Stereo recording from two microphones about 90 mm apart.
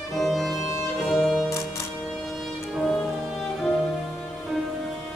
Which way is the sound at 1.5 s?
35° left (ahead or behind).